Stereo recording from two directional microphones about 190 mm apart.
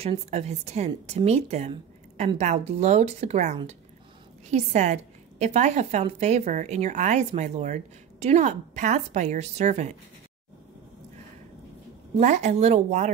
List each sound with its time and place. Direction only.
0.3 s a woman's voice: 35° right (ahead or behind)
12.2 s a woman's voice: 40° right (ahead or behind)